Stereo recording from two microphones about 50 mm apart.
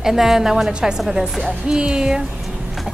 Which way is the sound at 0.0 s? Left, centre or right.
Centre.